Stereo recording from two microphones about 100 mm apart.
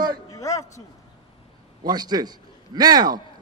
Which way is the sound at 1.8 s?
45° right (ahead or behind).